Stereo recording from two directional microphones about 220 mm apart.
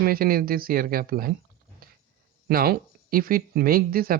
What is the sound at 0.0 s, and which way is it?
Speech, 40° right (ahead or behind).